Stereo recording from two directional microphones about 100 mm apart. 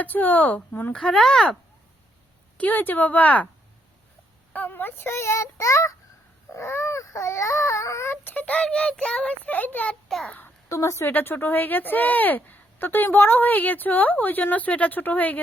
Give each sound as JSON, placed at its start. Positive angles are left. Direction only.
{"t": 0.0, "sound": "speech", "side_deg": 15}
{"t": 0.9, "sound": "speech", "side_deg": 5}
{"t": 2.6, "sound": "speech", "side_deg": 15}
{"t": 4.5, "sound": "speech", "side_deg": 20}
{"t": 6.5, "sound": "baby cry", "side_deg": 25}
{"t": 9.9, "sound": "a child's voice", "side_deg": 5}
{"t": 10.2, "sound": "a sound", "side_deg": 20}
{"t": 10.7, "sound": "speech", "side_deg": 30}